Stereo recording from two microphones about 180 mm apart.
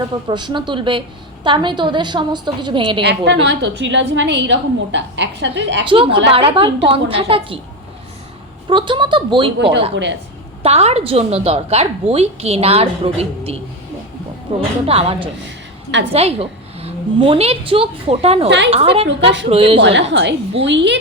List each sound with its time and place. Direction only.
0.3 s a woman's voice: 25° right (ahead or behind)
3.0 s a woman's voice: 70° right (ahead or behind)
5.8 s a woman's voice: 30° right (ahead or behind)
8.7 s a woman's voice: 25° right (ahead or behind)
9.9 s a woman's voice: 90° right
10.6 s a woman's voice: 35° right (ahead or behind)
18.4 s a woman's voice: 75° right (ahead or behind)
18.7 s a woman's voice: 30° right (ahead or behind)
19.0 s a woman's voice: 85° right
19.5 s a woman's voice: 30° right (ahead or behind)
19.8 s a woman's voice: 80° right